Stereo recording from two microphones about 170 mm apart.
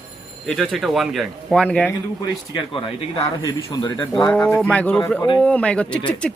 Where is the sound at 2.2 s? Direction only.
30° left (ahead or behind).